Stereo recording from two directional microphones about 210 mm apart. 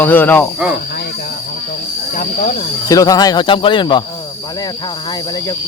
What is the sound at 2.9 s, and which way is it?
Speech, 15° left (ahead or behind).